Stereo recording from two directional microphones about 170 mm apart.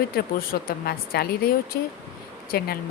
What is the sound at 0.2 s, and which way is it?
Speech, 60° left (ahead or behind).